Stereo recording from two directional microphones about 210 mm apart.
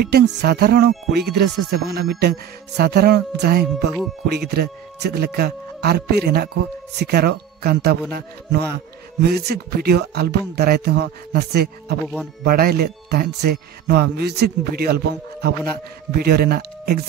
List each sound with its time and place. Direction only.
0.0 s speech: 50° right (ahead or behind)
16.1 s speech: 50° right (ahead or behind)